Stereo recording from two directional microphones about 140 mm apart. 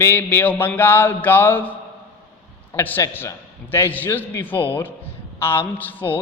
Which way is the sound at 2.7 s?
15° left (ahead or behind).